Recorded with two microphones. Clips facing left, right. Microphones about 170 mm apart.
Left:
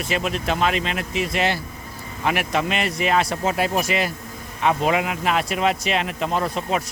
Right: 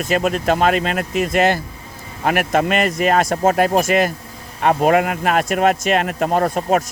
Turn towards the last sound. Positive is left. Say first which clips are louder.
# right 6 dB
turn(degrees=-50)  # may be behind; listen again after turning